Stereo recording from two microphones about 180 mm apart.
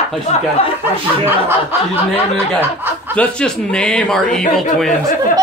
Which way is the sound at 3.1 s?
5° left (ahead or behind).